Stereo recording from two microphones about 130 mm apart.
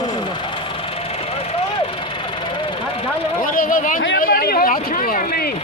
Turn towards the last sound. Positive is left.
turn(degrees=90)